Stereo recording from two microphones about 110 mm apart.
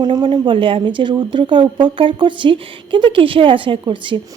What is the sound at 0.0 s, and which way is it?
Speech, 45° right (ahead or behind).